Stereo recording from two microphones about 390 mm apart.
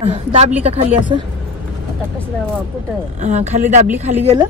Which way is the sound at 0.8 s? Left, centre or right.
Centre.